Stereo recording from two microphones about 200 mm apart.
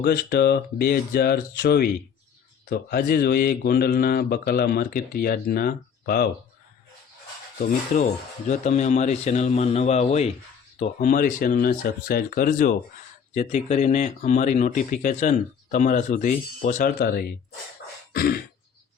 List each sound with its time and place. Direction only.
0.0 s speech: 50° left (ahead or behind)
7.9 s speech: 35° left (ahead or behind)